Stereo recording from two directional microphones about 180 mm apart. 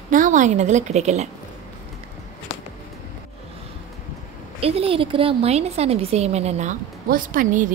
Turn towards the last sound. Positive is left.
turn(degrees=-45)  # may be behind; listen again after turning